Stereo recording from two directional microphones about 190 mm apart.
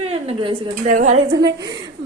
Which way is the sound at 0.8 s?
40° right (ahead or behind).